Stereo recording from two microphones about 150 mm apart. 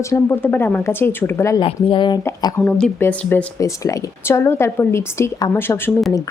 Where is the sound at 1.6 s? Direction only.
35° left (ahead or behind).